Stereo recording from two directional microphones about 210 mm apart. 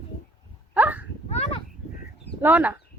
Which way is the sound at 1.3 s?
30° left (ahead or behind).